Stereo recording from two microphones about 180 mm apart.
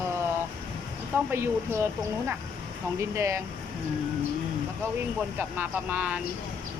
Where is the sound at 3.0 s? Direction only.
15° right (ahead or behind).